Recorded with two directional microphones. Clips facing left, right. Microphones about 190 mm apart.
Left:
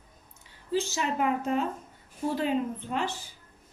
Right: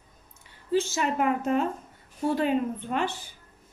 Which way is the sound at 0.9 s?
50° right (ahead or behind).